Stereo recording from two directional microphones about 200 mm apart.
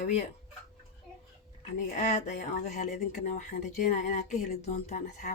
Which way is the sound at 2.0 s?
40° left (ahead or behind).